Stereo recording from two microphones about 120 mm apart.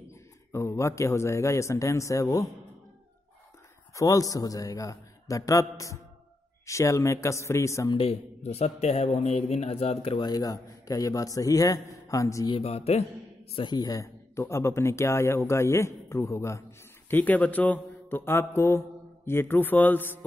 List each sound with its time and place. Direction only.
0.5 s speech: 25° left (ahead or behind)
3.9 s speech: 30° left (ahead or behind)
7.9 s a man's voice: 50° left (ahead or behind)
8.5 s speech: 60° left (ahead or behind); by 12.4 s 25° left (ahead or behind)
12.4 s speech: 55° left (ahead or behind)
13.6 s speech: 35° left (ahead or behind); by 20.2 s 15° left (ahead or behind)